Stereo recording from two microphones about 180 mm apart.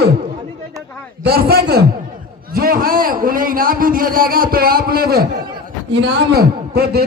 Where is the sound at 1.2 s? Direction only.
60° right (ahead or behind).